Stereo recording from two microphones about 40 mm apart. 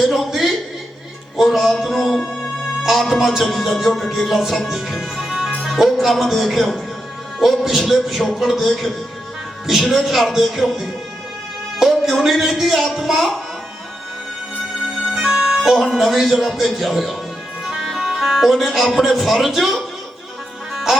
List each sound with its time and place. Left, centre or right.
0.0 s a sound: centre
1.4 s music: centre
4.3 s speech: centre
4.7 s music: centre
5.8 s speech: centre
15.1 s music: centre
16.0 s speech: centre
17.8 s music: centre
18.9 s speech: centre
20.9 s music: centre